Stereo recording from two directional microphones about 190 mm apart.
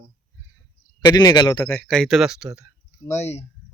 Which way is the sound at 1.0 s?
20° left (ahead or behind).